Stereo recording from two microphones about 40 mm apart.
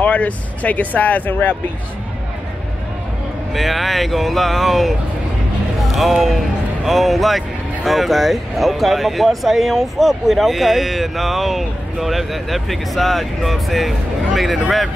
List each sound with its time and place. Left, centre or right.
0.0 s speech: left
3.5 s speech: centre
5.8 s music: centre
6.2 s speech: centre